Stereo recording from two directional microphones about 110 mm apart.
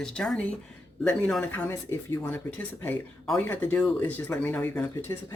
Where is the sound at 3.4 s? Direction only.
15° left (ahead or behind).